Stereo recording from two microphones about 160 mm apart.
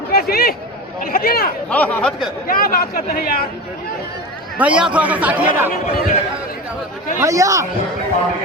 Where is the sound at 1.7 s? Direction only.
10° left (ahead or behind).